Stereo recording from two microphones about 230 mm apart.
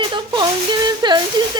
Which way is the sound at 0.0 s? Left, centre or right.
Right.